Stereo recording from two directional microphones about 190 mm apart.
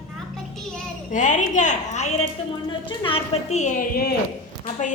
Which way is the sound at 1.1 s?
40° left (ahead or behind).